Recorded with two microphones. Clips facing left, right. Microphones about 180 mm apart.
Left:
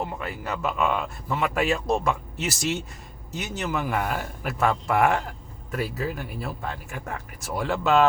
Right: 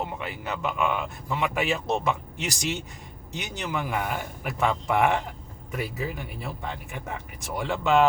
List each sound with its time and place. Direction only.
0.0 s a man's voice: centre (ahead or behind)